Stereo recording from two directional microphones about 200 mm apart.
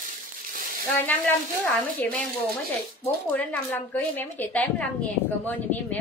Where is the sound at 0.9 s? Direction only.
10° left (ahead or behind).